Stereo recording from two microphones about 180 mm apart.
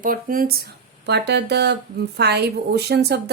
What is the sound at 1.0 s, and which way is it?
A woman's voice, 70° right (ahead or behind).